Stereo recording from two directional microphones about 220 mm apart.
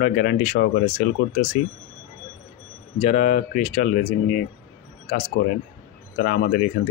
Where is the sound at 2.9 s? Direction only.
30° left (ahead or behind).